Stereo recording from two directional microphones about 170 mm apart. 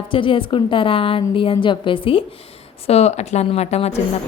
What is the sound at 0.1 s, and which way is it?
A woman's voice, 30° left (ahead or behind).